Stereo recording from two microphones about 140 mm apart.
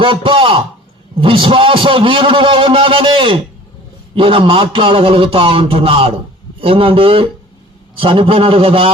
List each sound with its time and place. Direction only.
0.0 s a man's voice: 40° right (ahead or behind)